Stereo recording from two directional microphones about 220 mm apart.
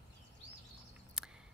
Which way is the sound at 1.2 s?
5° right (ahead or behind).